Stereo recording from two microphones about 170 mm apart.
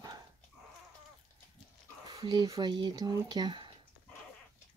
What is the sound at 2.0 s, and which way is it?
Speech, 25° right (ahead or behind).